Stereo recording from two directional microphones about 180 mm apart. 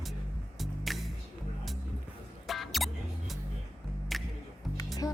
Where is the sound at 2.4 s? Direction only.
Centre (ahead or behind).